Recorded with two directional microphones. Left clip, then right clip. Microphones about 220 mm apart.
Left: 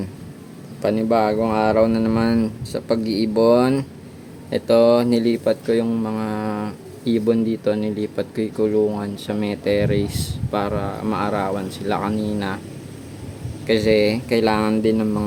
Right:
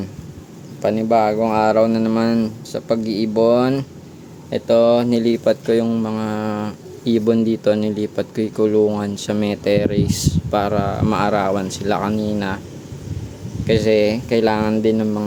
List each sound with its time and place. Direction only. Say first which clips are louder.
0.8 s speech: right 2 dB; 5° right (ahead or behind)
13.7 s speech: right 1 dB; 10° right (ahead or behind)